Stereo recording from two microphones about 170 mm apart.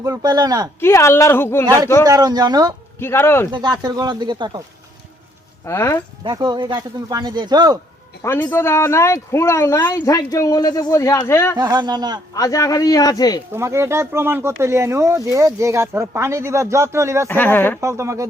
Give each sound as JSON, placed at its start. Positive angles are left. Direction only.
{"t": 0.0, "sound": "speech", "side_deg": -20}
{"t": 0.8, "sound": "speech", "side_deg": 15}
{"t": 1.6, "sound": "speech", "side_deg": -20}
{"t": 3.0, "sound": "speech", "side_deg": 15}
{"t": 3.5, "sound": "speech", "side_deg": -25}
{"t": 5.6, "sound": "speech", "side_deg": 15}
{"t": 6.2, "sound": "speech", "side_deg": -25}
{"t": 8.2, "sound": "speech", "side_deg": 15}
{"t": 11.5, "sound": "speech", "side_deg": -25}
{"t": 12.3, "sound": "a man's voice", "side_deg": 20}
{"t": 13.5, "sound": "speech", "side_deg": -15}
{"t": 17.2, "sound": "speech", "side_deg": 10}
{"t": 17.7, "sound": "speech", "side_deg": -15}